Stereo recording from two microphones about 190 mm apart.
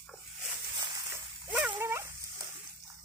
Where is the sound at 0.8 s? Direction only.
25° right (ahead or behind).